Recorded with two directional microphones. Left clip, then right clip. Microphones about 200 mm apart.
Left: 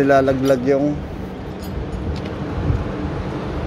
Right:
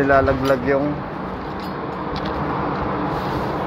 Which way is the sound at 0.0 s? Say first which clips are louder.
Left 1 dB; 60° left (ahead or behind).